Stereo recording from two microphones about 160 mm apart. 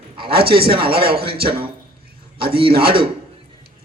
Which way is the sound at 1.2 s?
35° right (ahead or behind).